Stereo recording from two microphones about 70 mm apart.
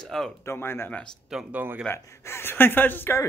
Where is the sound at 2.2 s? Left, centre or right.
Left.